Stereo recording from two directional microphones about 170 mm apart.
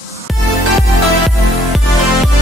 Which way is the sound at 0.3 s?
Centre (ahead or behind).